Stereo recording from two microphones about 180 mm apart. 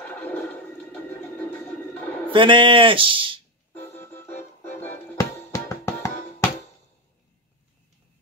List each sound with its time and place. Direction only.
0.0 s a sound: 10° left (ahead or behind)
2.3 s speech: 25° right (ahead or behind)
4.0 s music: 15° left (ahead or behind)